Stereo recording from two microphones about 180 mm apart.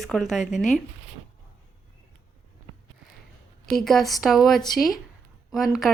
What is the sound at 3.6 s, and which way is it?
A woman's voice, centre (ahead or behind).